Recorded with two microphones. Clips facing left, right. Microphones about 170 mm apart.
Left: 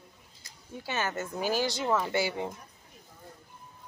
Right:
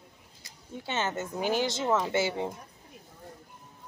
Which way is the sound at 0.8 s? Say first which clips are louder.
Right 1 dB; 25° right (ahead or behind).